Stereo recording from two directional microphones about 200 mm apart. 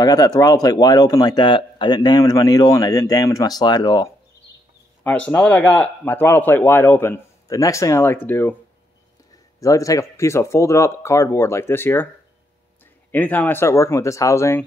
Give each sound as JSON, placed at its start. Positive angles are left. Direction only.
{"t": 0.0, "sound": "speech", "side_deg": 20}
{"t": 5.0, "sound": "speech", "side_deg": 10}
{"t": 9.6, "sound": "speech", "side_deg": 15}
{"t": 13.1, "sound": "speech", "side_deg": 10}